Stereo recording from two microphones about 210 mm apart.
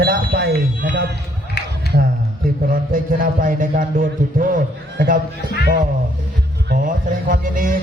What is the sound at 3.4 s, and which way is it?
Speech, 40° right (ahead or behind).